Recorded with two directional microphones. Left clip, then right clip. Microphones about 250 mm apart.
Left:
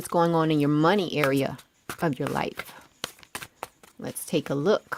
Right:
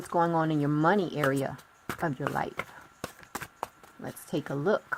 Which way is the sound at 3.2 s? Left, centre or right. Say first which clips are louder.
Even; centre.